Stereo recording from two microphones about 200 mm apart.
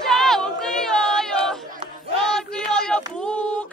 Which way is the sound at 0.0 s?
Centre (ahead or behind).